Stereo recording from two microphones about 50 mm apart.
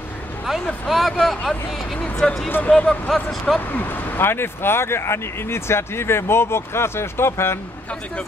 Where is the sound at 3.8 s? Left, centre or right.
Left.